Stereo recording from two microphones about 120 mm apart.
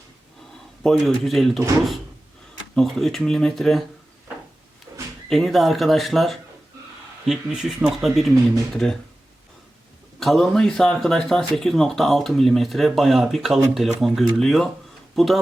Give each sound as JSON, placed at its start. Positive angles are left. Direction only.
{"t": 0.8, "sound": "speech", "side_deg": 0}
{"t": 2.7, "sound": "speech", "side_deg": 0}
{"t": 4.9, "sound": "a sound", "side_deg": -25}
{"t": 5.3, "sound": "speech", "side_deg": 0}
{"t": 10.2, "sound": "speech", "side_deg": 0}